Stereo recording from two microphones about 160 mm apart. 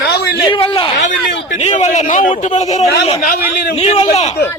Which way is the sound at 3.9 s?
40° left (ahead or behind).